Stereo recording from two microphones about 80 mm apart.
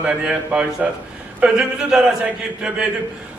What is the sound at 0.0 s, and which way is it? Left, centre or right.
A man's voice, centre.